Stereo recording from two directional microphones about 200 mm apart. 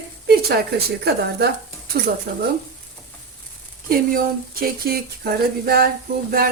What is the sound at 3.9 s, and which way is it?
Speech, 45° right (ahead or behind).